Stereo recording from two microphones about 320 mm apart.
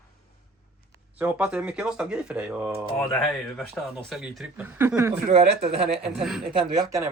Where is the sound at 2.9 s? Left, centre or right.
Centre.